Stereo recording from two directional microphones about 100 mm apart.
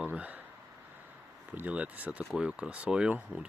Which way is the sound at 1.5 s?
15° right (ahead or behind).